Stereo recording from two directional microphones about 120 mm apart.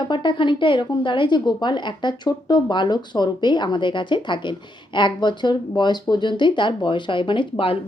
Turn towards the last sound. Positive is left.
turn(degrees=50)  # may be behind; listen again after turning